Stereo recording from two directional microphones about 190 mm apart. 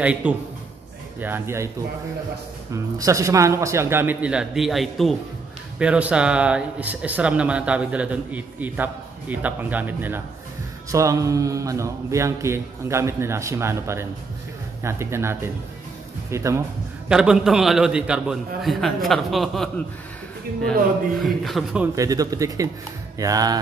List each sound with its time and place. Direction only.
0.0 s speech: 5° right (ahead or behind)
2.7 s speech: 15° right (ahead or behind)
17.1 s a man's voice: 5° right (ahead or behind)
21.2 s a man's voice: centre (ahead or behind)
21.9 s speech: 20° right (ahead or behind)